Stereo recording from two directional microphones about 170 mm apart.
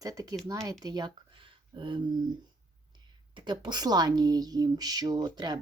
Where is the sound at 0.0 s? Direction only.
20° right (ahead or behind).